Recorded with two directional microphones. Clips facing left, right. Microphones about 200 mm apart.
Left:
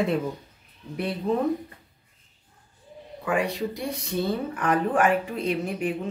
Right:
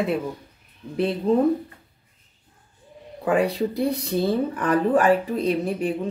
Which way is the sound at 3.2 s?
35° right (ahead or behind).